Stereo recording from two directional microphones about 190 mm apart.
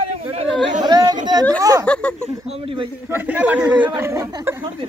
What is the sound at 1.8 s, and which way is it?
Speech, 5° left (ahead or behind).